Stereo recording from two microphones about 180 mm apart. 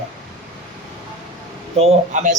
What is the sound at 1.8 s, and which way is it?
Speech, 40° right (ahead or behind).